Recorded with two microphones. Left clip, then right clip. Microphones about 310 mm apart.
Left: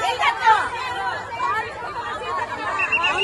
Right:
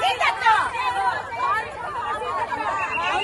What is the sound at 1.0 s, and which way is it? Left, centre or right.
Chatter, right.